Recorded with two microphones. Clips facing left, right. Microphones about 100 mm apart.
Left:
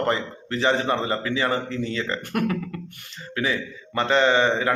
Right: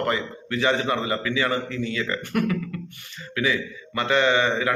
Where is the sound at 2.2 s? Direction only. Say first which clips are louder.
Right 1 dB; 45° left (ahead or behind).